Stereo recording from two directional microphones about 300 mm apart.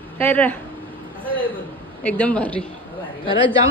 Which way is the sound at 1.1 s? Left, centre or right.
Centre.